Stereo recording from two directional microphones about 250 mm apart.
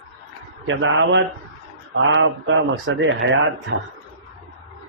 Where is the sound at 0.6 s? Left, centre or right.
Right.